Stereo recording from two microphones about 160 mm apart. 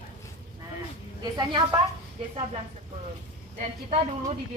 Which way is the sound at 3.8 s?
40° right (ahead or behind).